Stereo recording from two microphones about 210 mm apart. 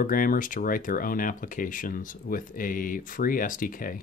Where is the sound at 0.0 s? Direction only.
40° left (ahead or behind).